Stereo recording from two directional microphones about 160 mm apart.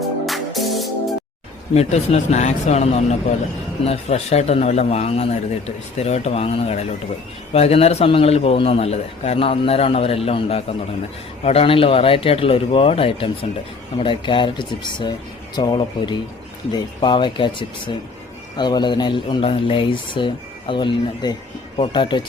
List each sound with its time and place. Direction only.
0.3 s music: centre (ahead or behind)
1.7 s a man's voice: 40° left (ahead or behind)